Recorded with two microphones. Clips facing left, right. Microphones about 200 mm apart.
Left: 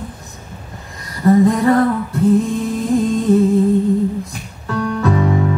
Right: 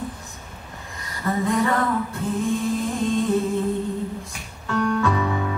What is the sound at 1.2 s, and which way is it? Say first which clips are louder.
Female singing: left 10 dB; 40° left (ahead or behind).